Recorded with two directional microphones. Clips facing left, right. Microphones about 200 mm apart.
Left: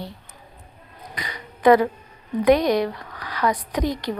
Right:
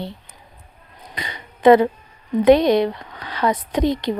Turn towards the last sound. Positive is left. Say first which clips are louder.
# right 5 dB
turn(degrees=-25)  # may be behind; listen again after turning